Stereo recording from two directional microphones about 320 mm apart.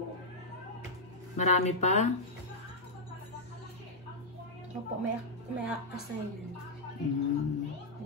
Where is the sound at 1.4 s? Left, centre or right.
Left.